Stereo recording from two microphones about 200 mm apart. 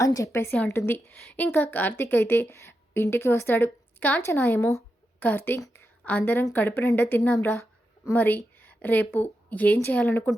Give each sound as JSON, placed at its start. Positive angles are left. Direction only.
{"t": 0.0, "sound": "a woman's voice", "side_deg": 15}